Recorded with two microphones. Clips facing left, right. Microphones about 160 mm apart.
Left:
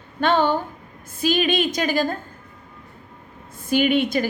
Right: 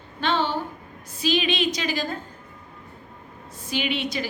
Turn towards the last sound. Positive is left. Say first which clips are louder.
# left 8 dB
turn(degrees=50)  # may be behind; listen again after turning